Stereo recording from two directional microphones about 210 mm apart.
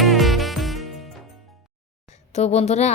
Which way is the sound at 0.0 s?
Centre (ahead or behind).